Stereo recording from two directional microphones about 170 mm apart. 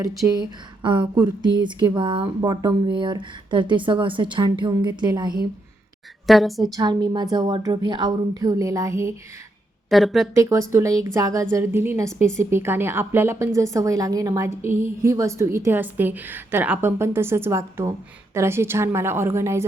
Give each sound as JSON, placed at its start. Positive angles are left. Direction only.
{"t": 0.0, "sound": "speech", "side_deg": -20}
{"t": 6.2, "sound": "a woman's voice", "side_deg": 0}
{"t": 6.7, "sound": "speech", "side_deg": -25}
{"t": 9.9, "sound": "a woman's voice", "side_deg": 0}
{"t": 10.3, "sound": "a woman's voice", "side_deg": -20}